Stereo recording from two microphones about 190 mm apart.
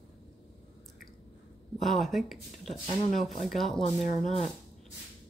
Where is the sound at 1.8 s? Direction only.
Centre (ahead or behind).